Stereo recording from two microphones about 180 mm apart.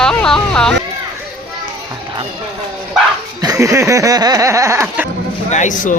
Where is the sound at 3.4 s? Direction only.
20° right (ahead or behind).